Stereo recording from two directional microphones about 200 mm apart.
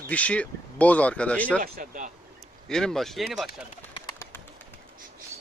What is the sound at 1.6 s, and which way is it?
Speech, 45° right (ahead or behind).